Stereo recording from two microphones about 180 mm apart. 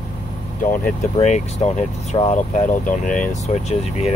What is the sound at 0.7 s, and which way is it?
Speech, 45° left (ahead or behind).